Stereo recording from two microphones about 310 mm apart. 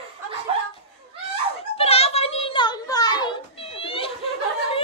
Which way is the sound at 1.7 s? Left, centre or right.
Centre.